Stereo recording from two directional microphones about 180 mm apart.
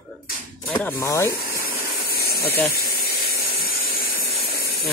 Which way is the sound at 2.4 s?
10° left (ahead or behind).